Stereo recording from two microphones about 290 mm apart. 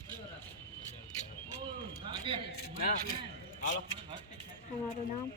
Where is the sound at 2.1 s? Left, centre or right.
Centre.